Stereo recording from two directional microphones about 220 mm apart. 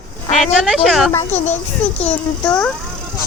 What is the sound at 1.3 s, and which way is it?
Speech, 30° left (ahead or behind).